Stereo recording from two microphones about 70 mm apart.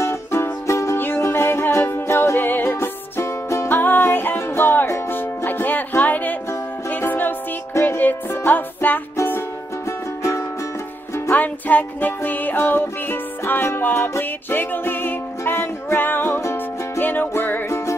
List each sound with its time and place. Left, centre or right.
0.0 s music: left
0.9 s music: left
3.6 s music: left
11.2 s music: left
16.3 s music: left
17.0 s music: left